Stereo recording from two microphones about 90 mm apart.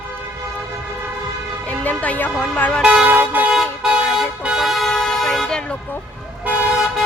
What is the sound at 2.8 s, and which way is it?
Vehicle, 10° right (ahead or behind).